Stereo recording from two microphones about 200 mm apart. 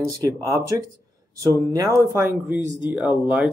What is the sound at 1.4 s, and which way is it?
Speech, 15° right (ahead or behind).